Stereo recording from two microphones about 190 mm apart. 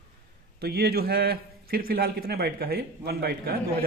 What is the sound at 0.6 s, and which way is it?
A man's voice, 55° right (ahead or behind).